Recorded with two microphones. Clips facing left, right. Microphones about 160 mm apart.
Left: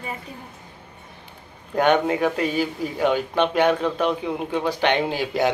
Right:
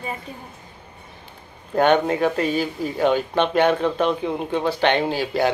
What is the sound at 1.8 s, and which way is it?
Speech, 10° left (ahead or behind).